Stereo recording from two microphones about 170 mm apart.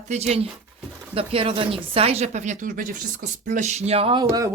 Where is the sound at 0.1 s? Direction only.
40° right (ahead or behind).